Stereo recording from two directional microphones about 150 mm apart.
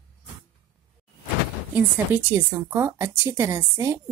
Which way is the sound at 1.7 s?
10° right (ahead or behind).